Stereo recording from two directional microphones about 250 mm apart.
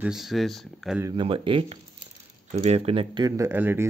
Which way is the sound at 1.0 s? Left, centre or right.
Centre.